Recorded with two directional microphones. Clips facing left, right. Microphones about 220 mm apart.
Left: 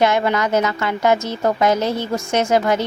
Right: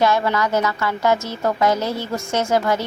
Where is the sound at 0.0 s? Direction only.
20° left (ahead or behind).